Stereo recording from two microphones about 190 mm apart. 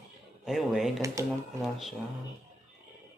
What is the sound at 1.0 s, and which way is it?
Speech, 15° right (ahead or behind).